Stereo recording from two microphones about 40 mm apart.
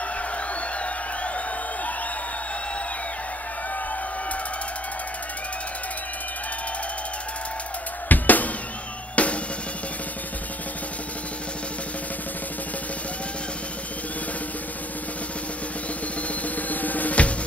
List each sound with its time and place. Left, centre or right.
8.1 s music: left
9.1 s drum kit: left
16.4 s drum: left